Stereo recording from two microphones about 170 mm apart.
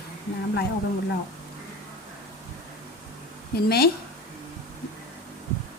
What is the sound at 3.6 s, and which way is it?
Speech, 65° left (ahead or behind).